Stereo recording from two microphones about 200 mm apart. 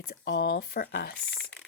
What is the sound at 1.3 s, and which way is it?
Speech, 5° left (ahead or behind).